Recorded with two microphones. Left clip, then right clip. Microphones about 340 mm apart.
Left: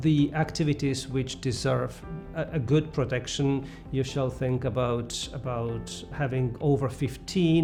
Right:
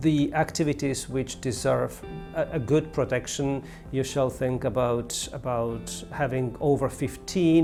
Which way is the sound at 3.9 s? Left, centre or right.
Right.